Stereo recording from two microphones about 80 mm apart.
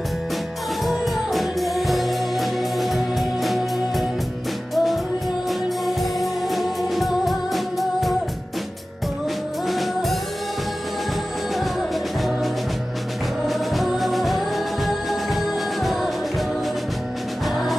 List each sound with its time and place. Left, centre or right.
0.8 s music: centre
9.7 s music: centre
13.5 s music: centre